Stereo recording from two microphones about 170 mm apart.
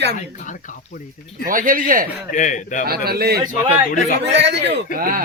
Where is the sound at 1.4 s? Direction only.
55° right (ahead or behind).